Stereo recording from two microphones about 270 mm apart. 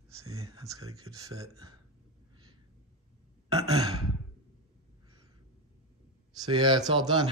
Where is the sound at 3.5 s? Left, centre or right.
Centre.